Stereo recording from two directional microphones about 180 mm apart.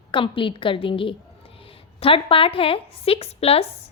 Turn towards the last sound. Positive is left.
turn(degrees=35)  # may be behind; listen again after turning